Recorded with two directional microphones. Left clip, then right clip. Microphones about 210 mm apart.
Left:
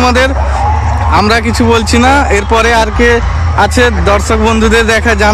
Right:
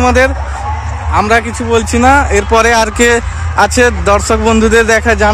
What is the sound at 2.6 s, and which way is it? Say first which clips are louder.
Speech: left 1 dB; 20° right (ahead or behind).